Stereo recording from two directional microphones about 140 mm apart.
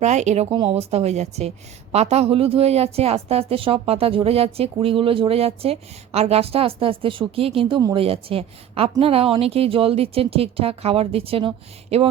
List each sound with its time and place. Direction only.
0.0 s speech: 55° right (ahead or behind)
0.5 s a woman's voice: 40° right (ahead or behind)